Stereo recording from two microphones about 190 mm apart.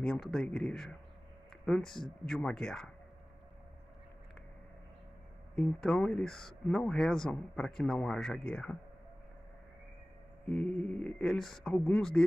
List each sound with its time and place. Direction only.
0.0 s speech: 5° left (ahead or behind)
5.6 s speech: 5° left (ahead or behind)
10.5 s speech: 5° left (ahead or behind)